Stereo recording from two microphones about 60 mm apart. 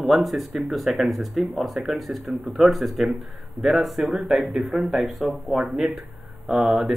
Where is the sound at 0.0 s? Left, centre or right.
Centre.